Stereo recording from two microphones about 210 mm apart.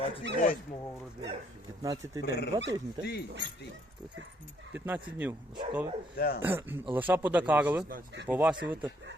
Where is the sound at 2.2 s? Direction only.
50° left (ahead or behind).